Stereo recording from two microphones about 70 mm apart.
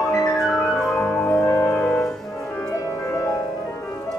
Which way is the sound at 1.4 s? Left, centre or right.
Left.